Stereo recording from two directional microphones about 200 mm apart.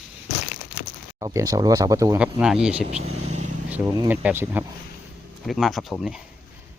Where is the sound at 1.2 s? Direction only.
15° right (ahead or behind).